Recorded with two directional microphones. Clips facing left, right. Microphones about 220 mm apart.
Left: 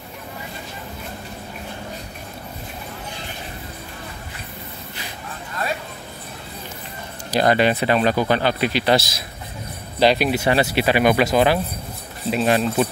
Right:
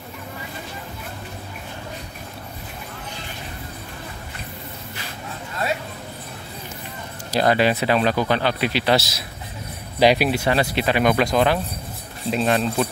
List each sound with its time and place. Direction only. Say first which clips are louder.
7.3 s speech: left 1 dB; centre (ahead or behind)